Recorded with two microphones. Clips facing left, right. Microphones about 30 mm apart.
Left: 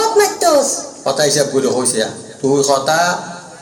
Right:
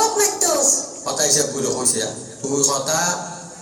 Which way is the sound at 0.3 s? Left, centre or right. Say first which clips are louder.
Left 7 dB; left.